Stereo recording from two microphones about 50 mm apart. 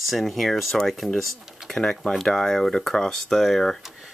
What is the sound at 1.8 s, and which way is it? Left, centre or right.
Speech, left.